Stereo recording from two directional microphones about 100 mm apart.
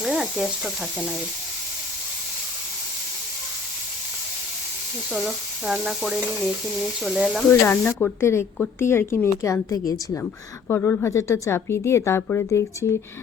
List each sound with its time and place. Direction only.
0.0 s speech: centre (ahead or behind)
5.1 s speech: 5° right (ahead or behind)
7.6 s a woman's voice: 20° left (ahead or behind); by 10.0 s 35° left (ahead or behind)
10.7 s a woman's voice: 25° left (ahead or behind)